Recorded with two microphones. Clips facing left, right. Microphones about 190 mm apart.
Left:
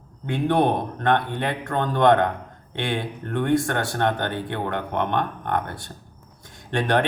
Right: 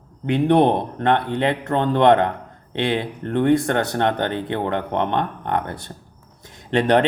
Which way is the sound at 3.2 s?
20° right (ahead or behind).